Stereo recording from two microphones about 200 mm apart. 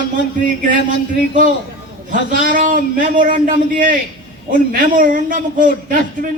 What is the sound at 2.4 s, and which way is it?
A man's voice, 40° right (ahead or behind).